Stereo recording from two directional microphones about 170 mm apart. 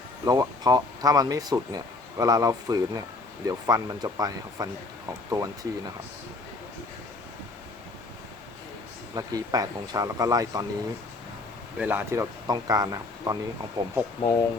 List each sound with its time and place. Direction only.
0.3 s speech: 20° right (ahead or behind)
9.1 s speech: 20° right (ahead or behind)
11.8 s speech: 10° right (ahead or behind)
14.2 s speech: 25° left (ahead or behind)